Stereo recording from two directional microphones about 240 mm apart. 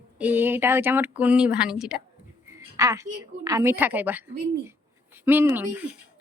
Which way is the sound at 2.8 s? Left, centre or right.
Centre.